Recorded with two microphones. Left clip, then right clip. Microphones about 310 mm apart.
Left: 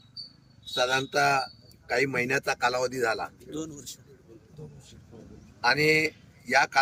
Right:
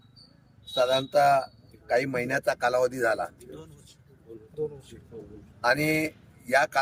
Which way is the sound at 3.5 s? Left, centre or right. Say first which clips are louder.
Left 9 dB; left.